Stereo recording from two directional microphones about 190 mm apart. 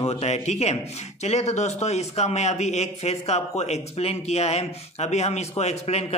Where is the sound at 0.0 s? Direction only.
35° left (ahead or behind).